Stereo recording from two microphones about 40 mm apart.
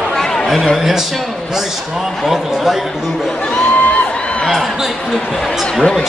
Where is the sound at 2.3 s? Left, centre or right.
Centre.